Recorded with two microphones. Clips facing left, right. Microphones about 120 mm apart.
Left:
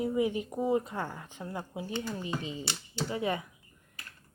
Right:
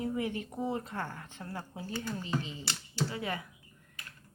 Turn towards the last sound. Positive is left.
turn(degrees=20)  # may be behind; listen again after turning